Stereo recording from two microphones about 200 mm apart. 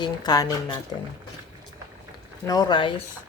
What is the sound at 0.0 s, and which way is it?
Speech, 20° left (ahead or behind).